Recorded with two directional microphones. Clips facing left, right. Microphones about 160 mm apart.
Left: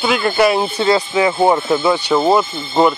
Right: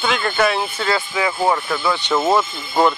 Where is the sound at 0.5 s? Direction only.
30° left (ahead or behind).